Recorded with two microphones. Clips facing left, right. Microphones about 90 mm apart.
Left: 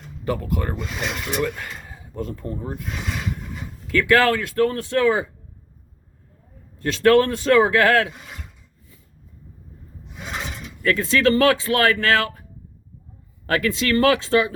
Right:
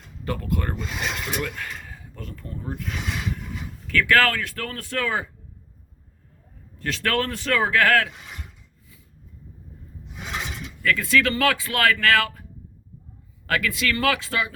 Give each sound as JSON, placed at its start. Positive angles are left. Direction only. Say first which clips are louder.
{"t": 0.3, "sound": "speech", "louder": "left 3 dB", "side_deg": 15}
{"t": 1.0, "sound": "speech", "louder": "left 4 dB", "side_deg": 0}
{"t": 1.6, "sound": "speech", "louder": "even", "side_deg": 25}
{"t": 3.9, "sound": "speech", "louder": "left 3 dB", "side_deg": 20}
{"t": 6.8, "sound": "speech", "louder": "left 9 dB", "side_deg": 20}
{"t": 10.8, "sound": "speech", "louder": "left 3 dB", "side_deg": 25}
{"t": 13.5, "sound": "speech", "louder": "left 4 dB", "side_deg": 30}